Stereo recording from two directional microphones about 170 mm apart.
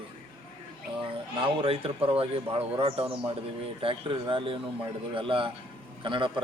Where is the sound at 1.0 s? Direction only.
35° right (ahead or behind).